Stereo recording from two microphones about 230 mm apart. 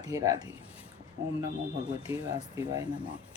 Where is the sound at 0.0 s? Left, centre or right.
Centre.